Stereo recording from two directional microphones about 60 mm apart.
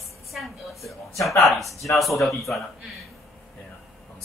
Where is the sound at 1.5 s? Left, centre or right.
Centre.